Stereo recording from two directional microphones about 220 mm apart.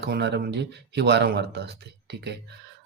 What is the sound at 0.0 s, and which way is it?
Speech, 50° right (ahead or behind).